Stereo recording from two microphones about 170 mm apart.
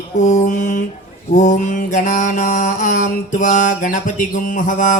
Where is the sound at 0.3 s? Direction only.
45° left (ahead or behind).